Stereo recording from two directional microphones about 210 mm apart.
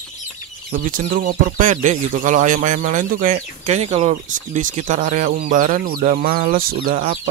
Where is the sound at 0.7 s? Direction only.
40° right (ahead or behind).